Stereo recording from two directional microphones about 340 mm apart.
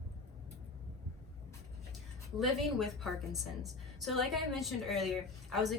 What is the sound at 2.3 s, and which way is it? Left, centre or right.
A woman's voice, centre.